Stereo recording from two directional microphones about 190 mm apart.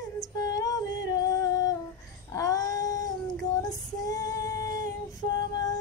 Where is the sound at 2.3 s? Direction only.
20° left (ahead or behind).